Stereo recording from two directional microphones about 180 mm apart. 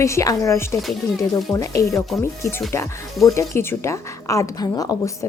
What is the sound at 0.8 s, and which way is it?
Speech, centre (ahead or behind).